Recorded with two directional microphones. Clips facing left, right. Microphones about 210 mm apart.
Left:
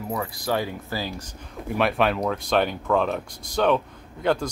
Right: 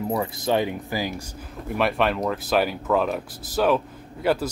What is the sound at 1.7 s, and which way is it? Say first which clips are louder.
Speech: even; centre (ahead or behind).